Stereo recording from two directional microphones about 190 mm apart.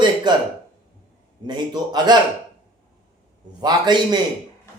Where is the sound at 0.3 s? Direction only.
20° right (ahead or behind).